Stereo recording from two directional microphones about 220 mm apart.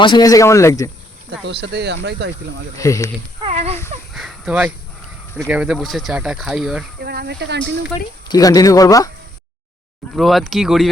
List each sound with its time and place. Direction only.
0.0 s speech: 20° left (ahead or behind)
1.3 s speech: 50° right (ahead or behind)
2.7 s speech: 15° left (ahead or behind)
3.4 s a sound: 30° right (ahead or behind)
4.1 s a sound: centre (ahead or behind)
5.4 s speech: 5° right (ahead or behind)
7.0 s speech: 45° right (ahead or behind)
7.9 s speech: 15° left (ahead or behind)
10.2 s speech: centre (ahead or behind)